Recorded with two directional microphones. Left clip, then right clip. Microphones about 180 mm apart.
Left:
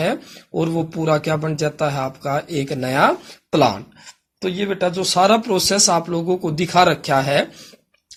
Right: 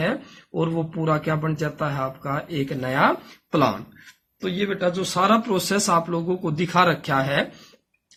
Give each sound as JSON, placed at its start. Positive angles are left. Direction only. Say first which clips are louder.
{"t": 0.0, "sound": "speech", "louder": "left 4 dB", "side_deg": 35}